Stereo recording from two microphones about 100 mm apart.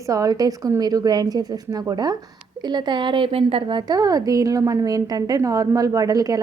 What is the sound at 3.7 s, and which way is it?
A woman's voice, 45° right (ahead or behind).